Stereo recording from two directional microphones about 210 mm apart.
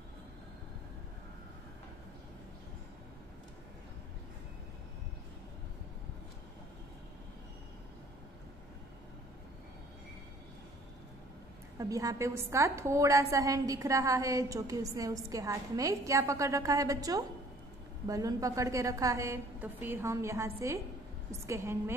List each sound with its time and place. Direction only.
11.8 s a woman's voice: 15° right (ahead or behind)